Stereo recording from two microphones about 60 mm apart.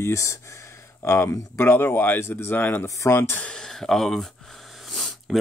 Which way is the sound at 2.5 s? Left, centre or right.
Left.